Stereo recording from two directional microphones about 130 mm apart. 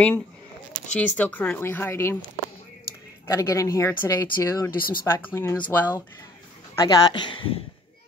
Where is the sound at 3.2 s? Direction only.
25° left (ahead or behind).